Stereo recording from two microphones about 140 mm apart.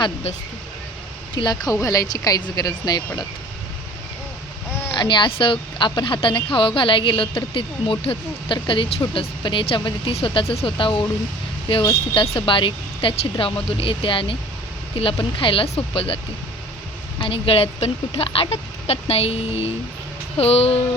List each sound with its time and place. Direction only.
1.4 s speech: 30° left (ahead or behind)
4.9 s a woman's voice: 35° left (ahead or behind)